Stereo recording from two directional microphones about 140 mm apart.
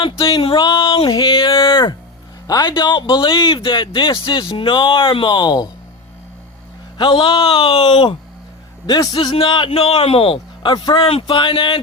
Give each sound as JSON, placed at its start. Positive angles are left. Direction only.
{"t": 0.0, "sound": "speech", "side_deg": 40}
{"t": 7.0, "sound": "a man's voice", "side_deg": 35}